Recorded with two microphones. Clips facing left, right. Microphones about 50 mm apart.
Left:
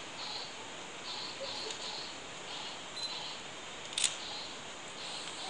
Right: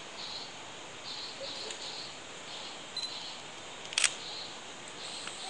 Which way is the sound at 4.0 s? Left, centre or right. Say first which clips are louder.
Right 7 dB; right.